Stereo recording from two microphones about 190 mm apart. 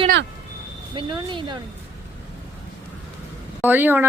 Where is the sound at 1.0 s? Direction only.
25° right (ahead or behind).